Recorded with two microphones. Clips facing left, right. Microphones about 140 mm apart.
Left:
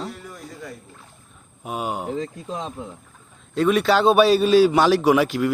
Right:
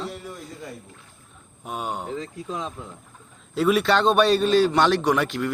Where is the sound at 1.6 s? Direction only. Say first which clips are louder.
Left 3 dB; 5° left (ahead or behind).